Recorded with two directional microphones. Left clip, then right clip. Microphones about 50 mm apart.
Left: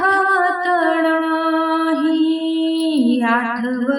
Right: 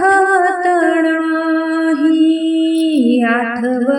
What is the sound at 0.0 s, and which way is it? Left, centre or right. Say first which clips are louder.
Music: right 4 dB; right.